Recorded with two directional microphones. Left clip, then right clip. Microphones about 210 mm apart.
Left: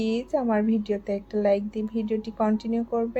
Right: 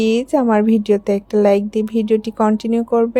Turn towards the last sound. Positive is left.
turn(degrees=-45)  # may be behind; listen again after turning